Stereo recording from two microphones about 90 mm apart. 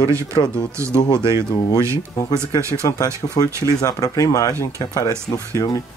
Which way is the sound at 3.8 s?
40° left (ahead or behind).